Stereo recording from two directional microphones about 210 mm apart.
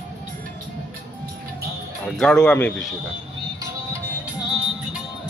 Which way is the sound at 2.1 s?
5° left (ahead or behind).